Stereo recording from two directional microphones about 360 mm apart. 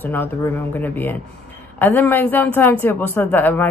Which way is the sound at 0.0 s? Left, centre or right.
Centre.